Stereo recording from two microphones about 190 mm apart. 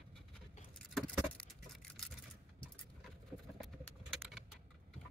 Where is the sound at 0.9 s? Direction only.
Centre (ahead or behind).